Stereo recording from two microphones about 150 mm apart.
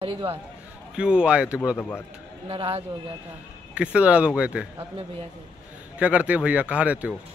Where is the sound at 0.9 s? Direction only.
5° right (ahead or behind).